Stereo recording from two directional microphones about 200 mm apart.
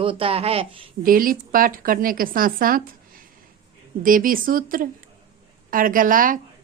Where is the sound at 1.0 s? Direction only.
45° right (ahead or behind).